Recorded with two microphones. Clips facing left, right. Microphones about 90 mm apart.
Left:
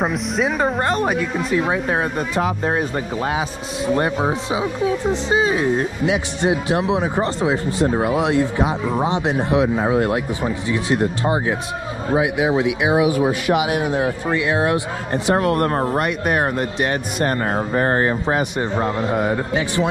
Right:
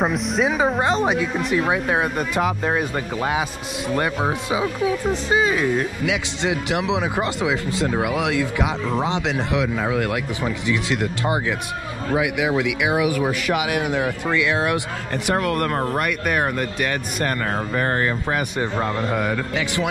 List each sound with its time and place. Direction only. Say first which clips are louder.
0.0 s a woman's voice: even; centre (ahead or behind)
2.4 s speech: even; 35° left (ahead or behind)
4.5 s speech: left 1 dB; 25° left (ahead or behind)
9.8 s speech: left 4 dB; 35° left (ahead or behind)
10.4 s speech: left 1 dB; 25° left (ahead or behind)
13.1 s speech: left 4 dB; 30° left (ahead or behind)
16.0 s speech: left 2 dB; 40° left (ahead or behind)
17.7 s speech: left 4 dB; 30° left (ahead or behind)